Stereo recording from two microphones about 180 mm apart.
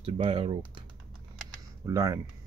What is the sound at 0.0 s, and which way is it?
Speech, 30° right (ahead or behind).